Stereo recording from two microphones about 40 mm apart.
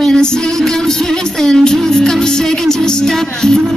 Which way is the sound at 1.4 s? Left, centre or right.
Centre.